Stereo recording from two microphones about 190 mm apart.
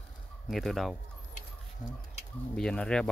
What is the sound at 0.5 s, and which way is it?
Speech, centre (ahead or behind).